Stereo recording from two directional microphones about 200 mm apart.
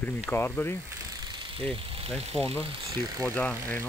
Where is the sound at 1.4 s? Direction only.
25° right (ahead or behind).